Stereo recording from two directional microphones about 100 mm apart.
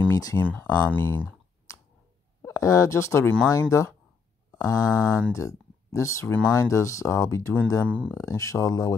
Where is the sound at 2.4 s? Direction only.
30° left (ahead or behind).